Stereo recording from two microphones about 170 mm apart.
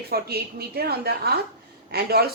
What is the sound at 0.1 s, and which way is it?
A woman's voice, 65° right (ahead or behind).